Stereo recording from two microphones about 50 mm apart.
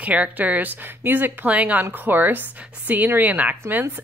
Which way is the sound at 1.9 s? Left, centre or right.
Right.